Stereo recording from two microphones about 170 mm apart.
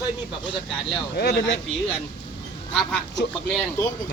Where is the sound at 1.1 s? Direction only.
75° left (ahead or behind).